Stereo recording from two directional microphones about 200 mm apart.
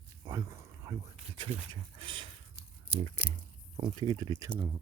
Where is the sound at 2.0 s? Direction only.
25° right (ahead or behind).